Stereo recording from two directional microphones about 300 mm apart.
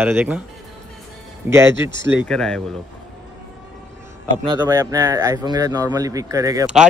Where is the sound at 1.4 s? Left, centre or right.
Centre.